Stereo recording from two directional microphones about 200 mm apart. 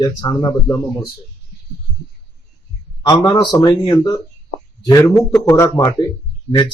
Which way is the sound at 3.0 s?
20° left (ahead or behind).